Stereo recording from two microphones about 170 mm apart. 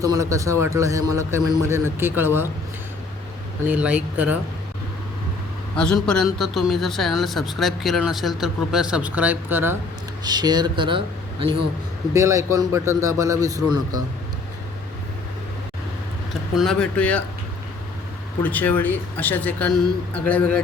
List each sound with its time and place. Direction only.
0.0 s a man's voice: 20° right (ahead or behind)
3.7 s a man's voice: 10° right (ahead or behind)
5.7 s speech: 5° left (ahead or behind); by 9.7 s 10° right (ahead or behind)
10.2 s speech: 25° right (ahead or behind)
12.1 s a man's voice: 15° right (ahead or behind)
16.6 s speech: 5° left (ahead or behind)
18.4 s speech: 10° left (ahead or behind)